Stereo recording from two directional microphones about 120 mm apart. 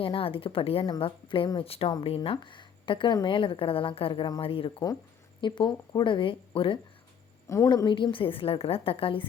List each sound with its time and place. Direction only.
0.0 s a woman's voice: 50° left (ahead or behind)
7.4 s a woman's voice: 25° left (ahead or behind)
7.9 s a woman's voice: 40° left (ahead or behind)